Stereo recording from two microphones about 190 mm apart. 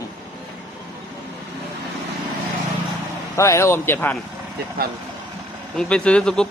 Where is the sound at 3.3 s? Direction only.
15° left (ahead or behind).